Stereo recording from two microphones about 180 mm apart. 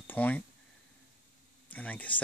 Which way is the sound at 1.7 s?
10° left (ahead or behind).